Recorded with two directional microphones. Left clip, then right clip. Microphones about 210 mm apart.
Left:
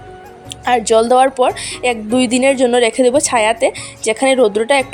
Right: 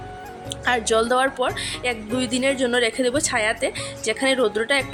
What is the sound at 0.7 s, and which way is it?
A woman's voice, 25° left (ahead or behind).